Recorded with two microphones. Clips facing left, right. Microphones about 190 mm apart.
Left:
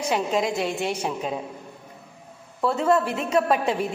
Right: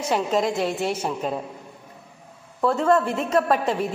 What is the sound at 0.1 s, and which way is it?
A woman's voice, centre (ahead or behind).